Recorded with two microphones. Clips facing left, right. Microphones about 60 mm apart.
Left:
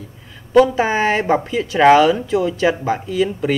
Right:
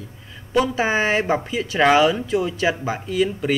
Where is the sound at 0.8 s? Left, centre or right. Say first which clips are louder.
Left 3 dB; centre.